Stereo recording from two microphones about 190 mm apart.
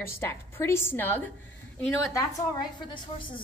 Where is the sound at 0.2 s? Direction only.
15° left (ahead or behind).